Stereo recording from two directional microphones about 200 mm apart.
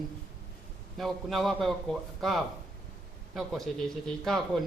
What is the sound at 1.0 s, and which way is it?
A man's voice, centre (ahead or behind).